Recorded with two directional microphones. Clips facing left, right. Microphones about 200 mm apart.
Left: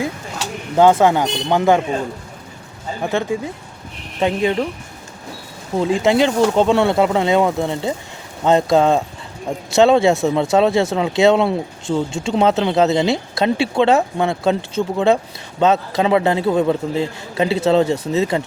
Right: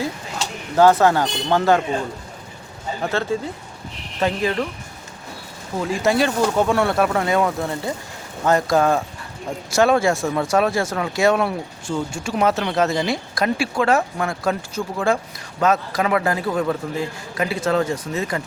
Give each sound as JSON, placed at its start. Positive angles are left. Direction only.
{"t": 0.8, "sound": "speech", "side_deg": 15}
{"t": 3.0, "sound": "speech", "side_deg": 15}
{"t": 5.7, "sound": "speech", "side_deg": 20}